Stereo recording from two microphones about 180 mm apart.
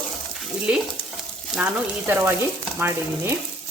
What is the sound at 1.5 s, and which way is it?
Speech, 10° right (ahead or behind).